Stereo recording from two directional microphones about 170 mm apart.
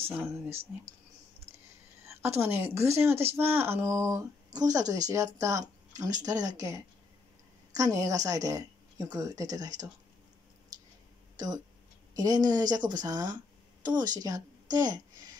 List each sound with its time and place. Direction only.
0.1 s a woman's voice: 15° right (ahead or behind)
0.5 s speech: 35° right (ahead or behind)
2.0 s a woman's voice: 15° right (ahead or behind)
11.3 s a woman's voice: 25° right (ahead or behind)